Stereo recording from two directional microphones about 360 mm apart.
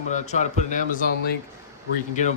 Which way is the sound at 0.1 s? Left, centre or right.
Centre.